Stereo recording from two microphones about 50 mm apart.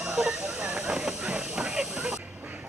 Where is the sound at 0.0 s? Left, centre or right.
Centre.